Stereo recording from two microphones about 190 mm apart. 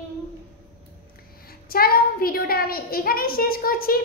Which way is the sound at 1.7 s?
50° left (ahead or behind).